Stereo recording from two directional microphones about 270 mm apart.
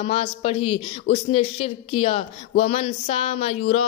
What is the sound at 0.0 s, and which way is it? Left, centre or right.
Speech, left.